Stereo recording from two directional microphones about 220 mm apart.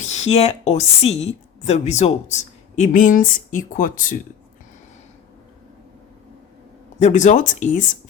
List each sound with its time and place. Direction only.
0.0 s a woman's voice: 30° left (ahead or behind)
7.0 s a woman's voice: 35° left (ahead or behind)